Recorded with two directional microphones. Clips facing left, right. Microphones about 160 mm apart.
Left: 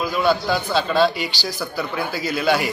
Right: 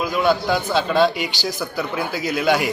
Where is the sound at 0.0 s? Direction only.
20° right (ahead or behind).